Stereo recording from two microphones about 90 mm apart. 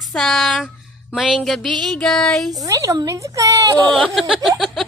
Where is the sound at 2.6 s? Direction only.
35° right (ahead or behind).